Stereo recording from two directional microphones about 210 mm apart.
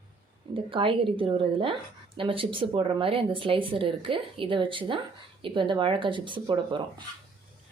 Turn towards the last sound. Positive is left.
turn(degrees=-20)  # may be behind; listen again after turning